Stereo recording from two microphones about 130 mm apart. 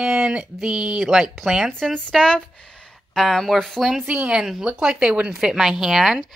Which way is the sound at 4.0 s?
10° right (ahead or behind).